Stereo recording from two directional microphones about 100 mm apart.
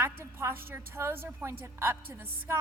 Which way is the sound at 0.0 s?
25° right (ahead or behind).